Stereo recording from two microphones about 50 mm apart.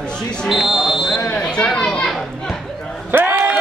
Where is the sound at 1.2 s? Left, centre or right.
Left.